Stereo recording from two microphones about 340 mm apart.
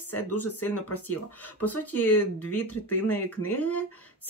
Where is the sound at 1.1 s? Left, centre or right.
Left.